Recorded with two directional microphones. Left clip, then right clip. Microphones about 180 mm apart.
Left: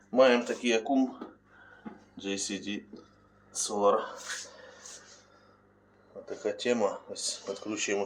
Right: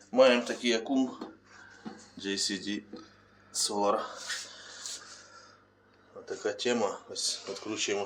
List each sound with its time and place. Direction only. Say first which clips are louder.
0.1 s speech: even; 15° left (ahead or behind)
2.1 s speech: right 2 dB; 5° left (ahead or behind)
6.2 s speech: left 1 dB; 15° left (ahead or behind)